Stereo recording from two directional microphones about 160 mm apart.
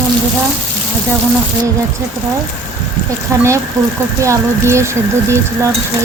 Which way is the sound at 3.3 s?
15° right (ahead or behind).